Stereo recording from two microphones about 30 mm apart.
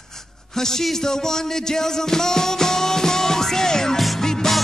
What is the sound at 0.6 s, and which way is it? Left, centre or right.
Music, centre.